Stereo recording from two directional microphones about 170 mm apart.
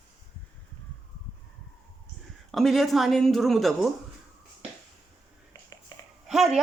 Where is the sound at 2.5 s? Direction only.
Centre (ahead or behind).